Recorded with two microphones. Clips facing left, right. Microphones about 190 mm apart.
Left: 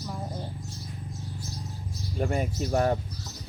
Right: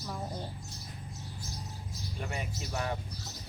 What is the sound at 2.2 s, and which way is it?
Speech, 45° left (ahead or behind).